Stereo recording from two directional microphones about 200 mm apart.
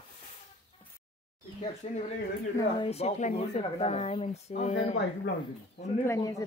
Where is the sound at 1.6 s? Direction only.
35° left (ahead or behind).